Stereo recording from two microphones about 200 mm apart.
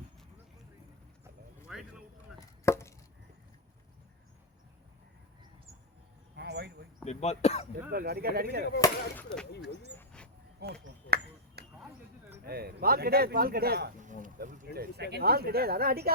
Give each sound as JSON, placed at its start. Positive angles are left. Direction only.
{"t": 1.7, "sound": "clip-clop", "side_deg": -5}
{"t": 2.6, "sound": "chopping", "side_deg": 15}
{"t": 6.3, "sound": "a sound", "side_deg": -55}
{"t": 7.0, "sound": "speech", "side_deg": 35}
{"t": 7.9, "sound": "speech", "side_deg": -50}
{"t": 8.8, "sound": "speech", "side_deg": 5}
{"t": 10.0, "sound": "dog", "side_deg": 5}
{"t": 10.6, "sound": "speech", "side_deg": -55}
{"t": 11.6, "sound": "a sound", "side_deg": -55}
{"t": 12.5, "sound": "speech", "side_deg": -50}